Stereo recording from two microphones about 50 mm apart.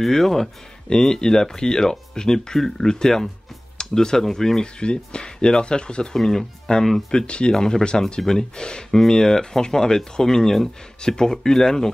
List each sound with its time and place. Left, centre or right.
0.0 s speech: centre
4.7 s speech: centre
7.1 s speech: centre